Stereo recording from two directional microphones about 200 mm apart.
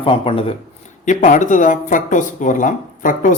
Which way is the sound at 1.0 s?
40° left (ahead or behind).